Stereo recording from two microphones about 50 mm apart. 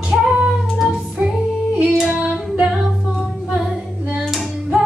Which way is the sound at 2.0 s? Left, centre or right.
Centre.